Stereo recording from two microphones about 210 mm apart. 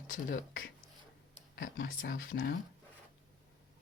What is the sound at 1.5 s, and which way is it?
Speech, 40° left (ahead or behind).